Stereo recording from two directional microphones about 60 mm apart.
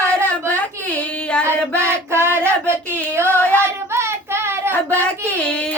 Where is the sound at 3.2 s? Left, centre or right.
Right.